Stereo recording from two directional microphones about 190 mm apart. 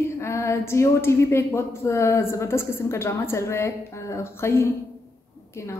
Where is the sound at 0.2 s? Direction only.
10° left (ahead or behind).